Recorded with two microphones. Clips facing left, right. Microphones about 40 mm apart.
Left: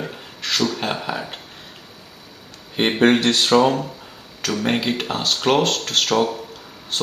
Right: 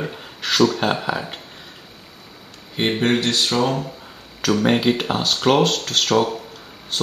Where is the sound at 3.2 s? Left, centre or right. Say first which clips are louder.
Left 4 dB; left.